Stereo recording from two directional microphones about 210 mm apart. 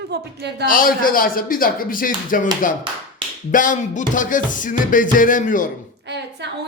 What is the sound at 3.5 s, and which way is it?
Music, 40° left (ahead or behind).